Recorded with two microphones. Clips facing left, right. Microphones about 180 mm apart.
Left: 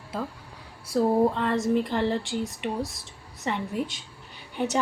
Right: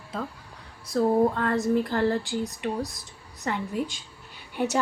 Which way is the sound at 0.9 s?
5° left (ahead or behind).